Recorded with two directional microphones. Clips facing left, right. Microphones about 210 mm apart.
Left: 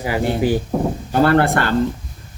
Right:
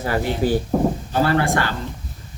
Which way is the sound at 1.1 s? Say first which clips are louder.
Left 8 dB; 55° left (ahead or behind).